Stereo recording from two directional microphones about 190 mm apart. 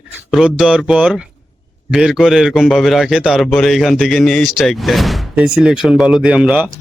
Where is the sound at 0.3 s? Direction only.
Centre (ahead or behind).